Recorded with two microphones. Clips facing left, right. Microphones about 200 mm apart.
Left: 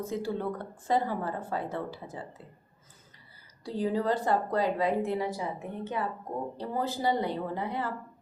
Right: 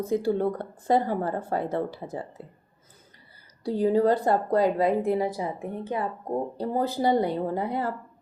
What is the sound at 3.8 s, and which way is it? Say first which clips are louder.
Speech: right 7 dB; 45° right (ahead or behind).